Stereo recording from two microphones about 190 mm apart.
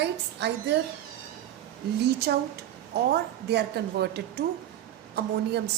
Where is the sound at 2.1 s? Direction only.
55° right (ahead or behind).